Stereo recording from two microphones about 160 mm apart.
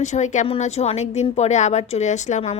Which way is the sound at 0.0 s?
45° left (ahead or behind).